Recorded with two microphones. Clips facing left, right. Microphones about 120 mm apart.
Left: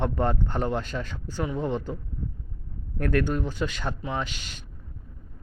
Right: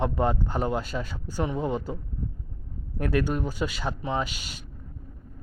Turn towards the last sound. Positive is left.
turn(degrees=-10)  # may be behind; listen again after turning